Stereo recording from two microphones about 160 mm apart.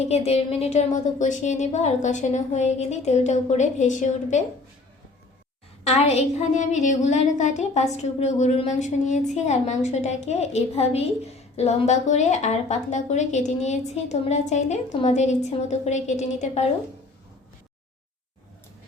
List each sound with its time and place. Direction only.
0.0 s a woman's voice: 40° left (ahead or behind)
5.8 s a woman's voice: 40° left (ahead or behind)